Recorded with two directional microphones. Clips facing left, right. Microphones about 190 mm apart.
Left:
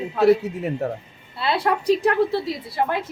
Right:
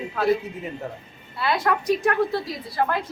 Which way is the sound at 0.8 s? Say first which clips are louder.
Left 8 dB; 65° left (ahead or behind).